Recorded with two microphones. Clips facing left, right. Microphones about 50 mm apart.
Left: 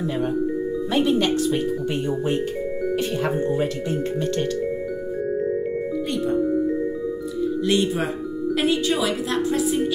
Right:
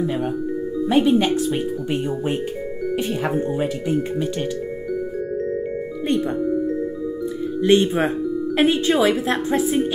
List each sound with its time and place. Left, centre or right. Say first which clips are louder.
0.8 s speech: right 4 dB; centre
7.6 s a woman's voice: right 7 dB; right